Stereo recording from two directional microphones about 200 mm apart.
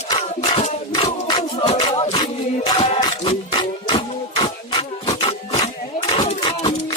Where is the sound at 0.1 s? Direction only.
25° left (ahead or behind).